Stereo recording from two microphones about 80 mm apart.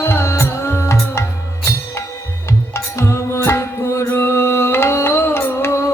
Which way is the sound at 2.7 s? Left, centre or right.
Left.